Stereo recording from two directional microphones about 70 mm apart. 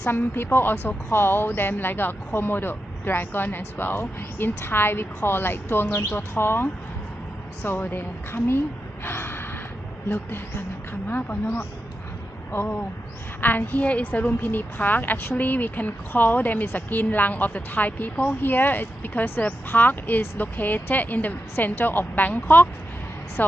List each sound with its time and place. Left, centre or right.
0.1 s speech: left
9.0 s gasp: left
10.1 s a woman's voice: left